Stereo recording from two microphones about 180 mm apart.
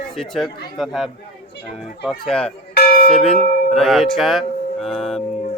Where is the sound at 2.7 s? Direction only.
55° left (ahead or behind).